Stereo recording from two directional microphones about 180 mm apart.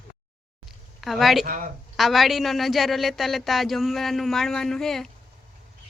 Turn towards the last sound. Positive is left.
turn(degrees=0)  # may be behind; listen again after turning